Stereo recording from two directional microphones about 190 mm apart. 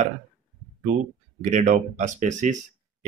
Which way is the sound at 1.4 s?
40° right (ahead or behind).